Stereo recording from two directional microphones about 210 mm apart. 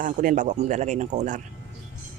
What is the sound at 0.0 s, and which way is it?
Speech, 40° right (ahead or behind).